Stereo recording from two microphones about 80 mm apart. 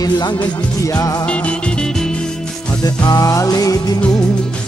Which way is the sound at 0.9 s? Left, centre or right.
Left.